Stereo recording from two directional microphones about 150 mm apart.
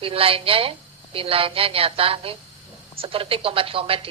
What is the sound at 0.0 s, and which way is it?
A woman's voice, 40° right (ahead or behind).